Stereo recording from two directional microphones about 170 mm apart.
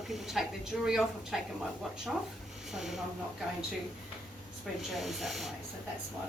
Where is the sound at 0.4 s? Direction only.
Centre (ahead or behind).